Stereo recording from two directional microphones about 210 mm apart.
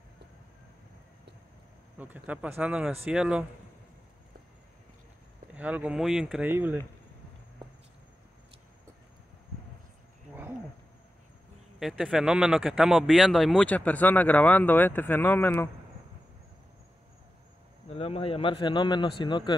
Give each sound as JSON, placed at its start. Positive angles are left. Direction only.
{"t": 2.0, "sound": "speech", "side_deg": -5}
{"t": 5.5, "sound": "speech", "side_deg": -5}
{"t": 11.8, "sound": "speech", "side_deg": 0}
{"t": 17.8, "sound": "speech", "side_deg": 25}